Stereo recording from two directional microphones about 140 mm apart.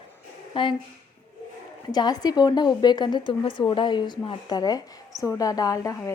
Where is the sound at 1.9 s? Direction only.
30° left (ahead or behind).